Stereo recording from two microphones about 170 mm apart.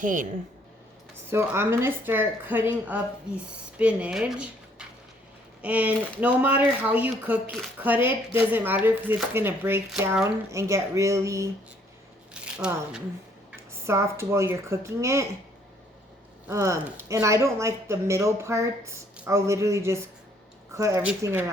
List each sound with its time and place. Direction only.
0.0 s speech: 50° right (ahead or behind)
1.3 s speech: 15° right (ahead or behind)
12.3 s speech: 5° right (ahead or behind)
13.8 s speech: 15° right (ahead or behind)
16.5 s speech: 15° right (ahead or behind)